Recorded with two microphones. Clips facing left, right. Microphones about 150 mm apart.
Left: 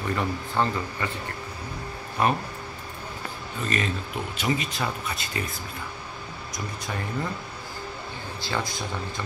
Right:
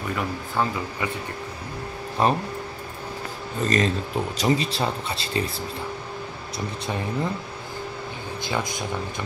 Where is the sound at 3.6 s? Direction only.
35° right (ahead or behind).